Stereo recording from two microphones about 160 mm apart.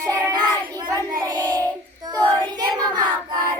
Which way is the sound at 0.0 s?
20° right (ahead or behind).